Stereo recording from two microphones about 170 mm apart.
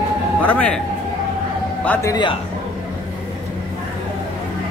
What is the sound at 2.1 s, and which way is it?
Speech, 25° left (ahead or behind).